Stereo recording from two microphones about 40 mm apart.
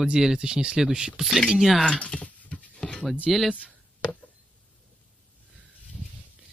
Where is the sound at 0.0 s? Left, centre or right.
Centre.